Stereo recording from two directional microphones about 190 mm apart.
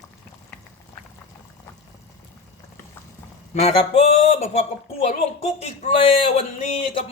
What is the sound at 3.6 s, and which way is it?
Speech, 30° left (ahead or behind).